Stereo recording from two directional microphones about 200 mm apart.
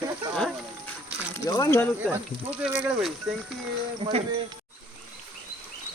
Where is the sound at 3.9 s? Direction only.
25° right (ahead or behind).